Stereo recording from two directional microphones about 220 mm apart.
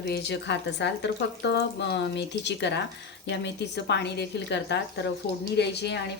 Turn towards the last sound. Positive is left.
turn(degrees=50)  # may be behind; listen again after turning